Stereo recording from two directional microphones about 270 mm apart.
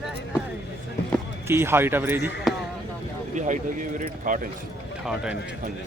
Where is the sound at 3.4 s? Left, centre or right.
Right.